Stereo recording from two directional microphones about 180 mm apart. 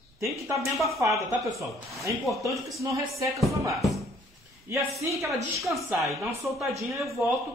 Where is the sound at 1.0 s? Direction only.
15° right (ahead or behind).